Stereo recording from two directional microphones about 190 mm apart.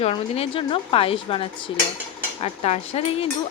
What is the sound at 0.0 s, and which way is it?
Speech, 30° left (ahead or behind).